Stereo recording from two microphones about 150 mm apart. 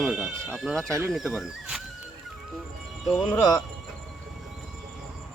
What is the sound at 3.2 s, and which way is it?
Speech, 10° left (ahead or behind).